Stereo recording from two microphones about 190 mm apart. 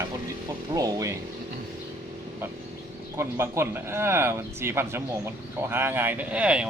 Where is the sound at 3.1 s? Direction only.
15° right (ahead or behind).